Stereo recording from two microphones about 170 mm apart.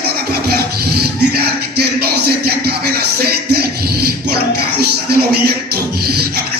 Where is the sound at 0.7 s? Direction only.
70° right (ahead or behind).